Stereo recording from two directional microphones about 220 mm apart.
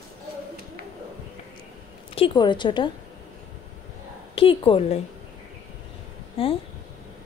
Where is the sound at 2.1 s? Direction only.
25° left (ahead or behind).